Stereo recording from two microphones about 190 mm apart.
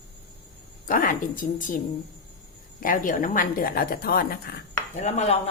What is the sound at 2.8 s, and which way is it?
A woman's voice, 45° left (ahead or behind).